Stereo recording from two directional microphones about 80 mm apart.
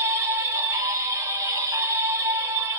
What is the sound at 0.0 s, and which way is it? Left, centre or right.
Music, right.